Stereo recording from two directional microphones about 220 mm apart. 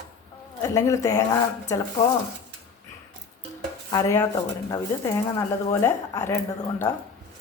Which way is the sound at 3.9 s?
15° left (ahead or behind).